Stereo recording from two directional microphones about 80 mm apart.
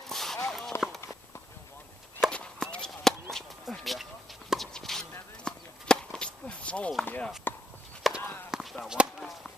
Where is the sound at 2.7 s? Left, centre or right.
Centre.